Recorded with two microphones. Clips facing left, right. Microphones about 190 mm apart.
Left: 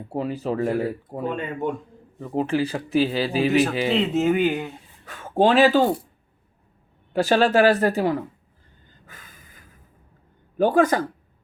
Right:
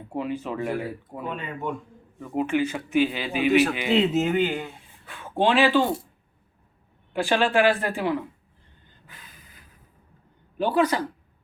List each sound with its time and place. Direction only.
0.1 s a man's voice: 35° left (ahead or behind)
3.9 s speech: centre (ahead or behind)
5.0 s speech: 45° left (ahead or behind)
7.1 s a man's voice: 40° left (ahead or behind)
9.0 s a sound: 45° left (ahead or behind)
10.6 s speech: 45° left (ahead or behind)